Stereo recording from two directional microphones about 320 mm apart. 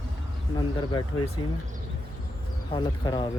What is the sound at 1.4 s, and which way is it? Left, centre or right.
Speech, left.